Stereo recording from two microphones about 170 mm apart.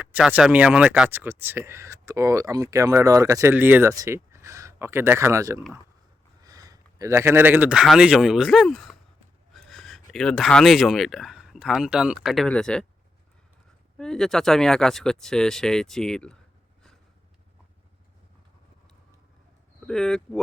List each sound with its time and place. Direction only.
0.0 s speech: 10° right (ahead or behind)
14.0 s speech: 5° left (ahead or behind)
19.9 s speech: 5° left (ahead or behind)